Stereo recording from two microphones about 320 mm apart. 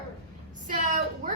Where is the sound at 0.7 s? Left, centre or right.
Right.